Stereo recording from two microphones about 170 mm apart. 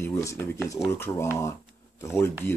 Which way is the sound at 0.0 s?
15° left (ahead or behind).